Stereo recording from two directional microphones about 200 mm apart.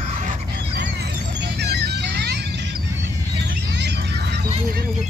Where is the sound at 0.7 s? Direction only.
50° right (ahead or behind).